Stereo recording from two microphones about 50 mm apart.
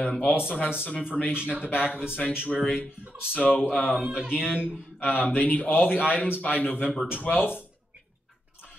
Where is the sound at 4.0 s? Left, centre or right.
Right.